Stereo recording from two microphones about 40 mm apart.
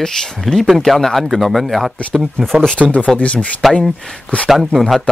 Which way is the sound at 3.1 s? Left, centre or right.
Left.